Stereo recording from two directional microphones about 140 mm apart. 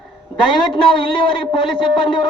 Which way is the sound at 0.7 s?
35° left (ahead or behind).